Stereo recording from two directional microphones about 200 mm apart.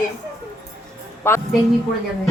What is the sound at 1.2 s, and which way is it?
Speech, 10° left (ahead or behind).